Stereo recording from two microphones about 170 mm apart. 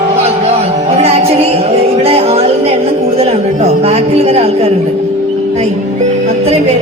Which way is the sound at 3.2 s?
35° right (ahead or behind).